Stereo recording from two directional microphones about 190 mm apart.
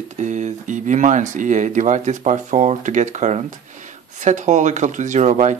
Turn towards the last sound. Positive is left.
turn(degrees=-40)  # may be behind; listen again after turning